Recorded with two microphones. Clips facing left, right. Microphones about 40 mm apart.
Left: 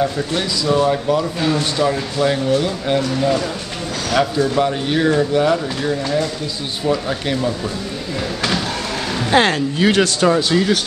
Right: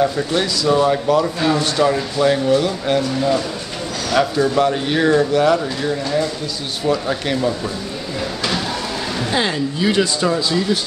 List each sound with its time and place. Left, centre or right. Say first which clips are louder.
0.0 s speech: right 2 dB; centre
9.3 s speech: left 6 dB; left
10.2 s speech: left 3 dB; left